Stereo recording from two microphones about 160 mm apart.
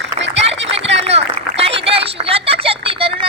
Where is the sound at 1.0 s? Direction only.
40° right (ahead or behind).